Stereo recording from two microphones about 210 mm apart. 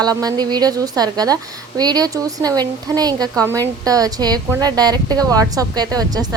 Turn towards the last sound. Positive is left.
turn(degrees=-20)  # may be behind; listen again after turning